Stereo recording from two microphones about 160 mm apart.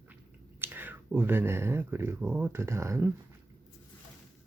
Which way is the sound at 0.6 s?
10° right (ahead or behind).